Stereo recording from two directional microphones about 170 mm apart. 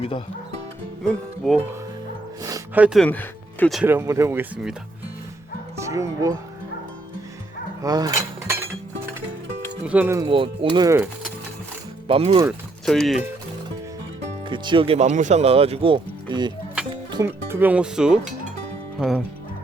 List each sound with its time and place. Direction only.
1.0 s speech: 5° left (ahead or behind)
2.7 s speech: 5° right (ahead or behind)
3.0 s speech: 10° left (ahead or behind)
3.8 s speech: 15° right (ahead or behind)
5.7 s speech: 20° right (ahead or behind)
7.8 s cutlery: 20° right (ahead or behind)
9.8 s speech: 10° right (ahead or behind)
10.2 s speech: 30° right (ahead or behind)
12.0 s speech: 35° right (ahead or behind)
12.8 s speech: centre (ahead or behind)
14.5 s speech: 30° right (ahead or behind)
16.9 s music: 25° right (ahead or behind)
17.2 s speech: 10° right (ahead or behind)